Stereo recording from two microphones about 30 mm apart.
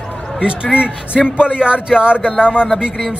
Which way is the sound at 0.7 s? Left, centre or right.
Right.